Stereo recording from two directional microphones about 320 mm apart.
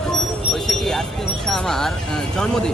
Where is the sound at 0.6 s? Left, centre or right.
Centre.